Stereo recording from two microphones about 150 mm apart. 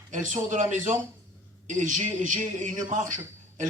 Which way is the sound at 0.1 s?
60° right (ahead or behind).